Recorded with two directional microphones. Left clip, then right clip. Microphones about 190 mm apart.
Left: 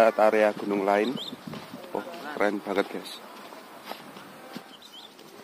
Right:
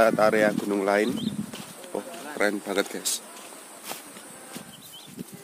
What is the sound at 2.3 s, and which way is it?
Speech, 20° right (ahead or behind).